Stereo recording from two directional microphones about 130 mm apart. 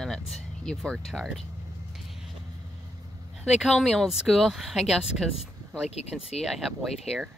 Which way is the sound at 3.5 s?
Centre (ahead or behind).